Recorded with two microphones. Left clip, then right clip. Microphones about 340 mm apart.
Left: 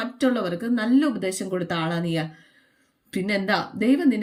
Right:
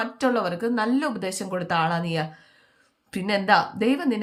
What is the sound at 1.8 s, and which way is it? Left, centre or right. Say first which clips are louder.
Speech: right 2 dB; right.